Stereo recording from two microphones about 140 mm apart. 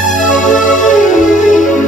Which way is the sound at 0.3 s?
65° left (ahead or behind).